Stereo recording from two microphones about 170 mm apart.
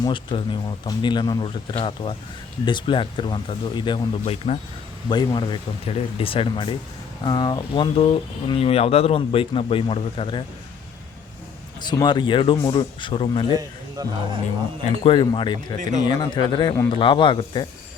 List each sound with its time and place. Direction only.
0.0 s speech: 30° left (ahead or behind)
11.9 s speech: 25° left (ahead or behind)
13.5 s speech: 20° right (ahead or behind)
15.0 s speech: 30° left (ahead or behind)
15.8 s speech: 45° right (ahead or behind)
16.0 s speech: 25° left (ahead or behind)